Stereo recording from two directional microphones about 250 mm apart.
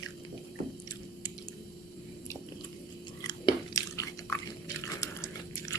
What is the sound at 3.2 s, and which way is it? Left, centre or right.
Chewing, centre.